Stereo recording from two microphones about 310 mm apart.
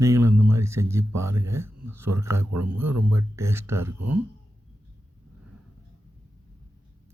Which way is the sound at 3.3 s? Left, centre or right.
Centre.